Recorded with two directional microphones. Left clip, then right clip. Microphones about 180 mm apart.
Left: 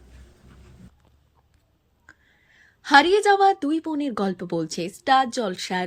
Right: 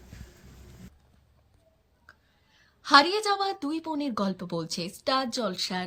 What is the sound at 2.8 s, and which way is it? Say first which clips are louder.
A woman's voice: left 5 dB; 10° left (ahead or behind).